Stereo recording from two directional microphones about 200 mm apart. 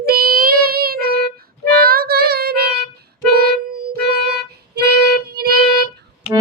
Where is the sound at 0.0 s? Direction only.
50° right (ahead or behind).